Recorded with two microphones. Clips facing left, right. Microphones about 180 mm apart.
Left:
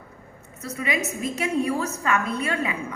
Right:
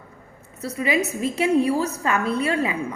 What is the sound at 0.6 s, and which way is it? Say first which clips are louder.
A woman's voice: right 5 dB; 30° right (ahead or behind).